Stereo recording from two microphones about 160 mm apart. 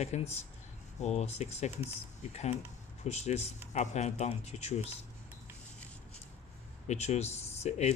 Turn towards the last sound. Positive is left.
turn(degrees=45)  # may be behind; listen again after turning